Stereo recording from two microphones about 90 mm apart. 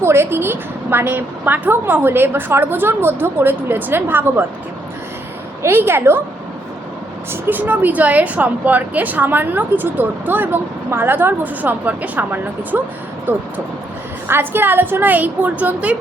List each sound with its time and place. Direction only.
0.0 s speech: 30° right (ahead or behind)
5.6 s speech: 25° right (ahead or behind)
7.4 s speech: 20° right (ahead or behind)
14.3 s speech: 25° right (ahead or behind)